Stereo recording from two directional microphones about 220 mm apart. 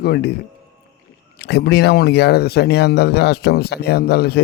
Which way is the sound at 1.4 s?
50° left (ahead or behind).